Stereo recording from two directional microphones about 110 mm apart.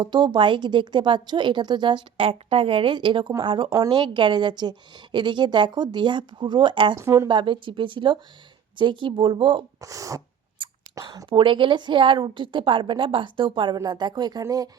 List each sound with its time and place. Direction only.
0.0 s a woman's voice: 45° right (ahead or behind)
6.9 s speech: 30° right (ahead or behind)
7.3 s a woman's voice: 50° right (ahead or behind)
9.8 s speech: 30° right (ahead or behind)
10.6 s a sound: 50° right (ahead or behind)
10.9 s a woman's voice: 35° right (ahead or behind)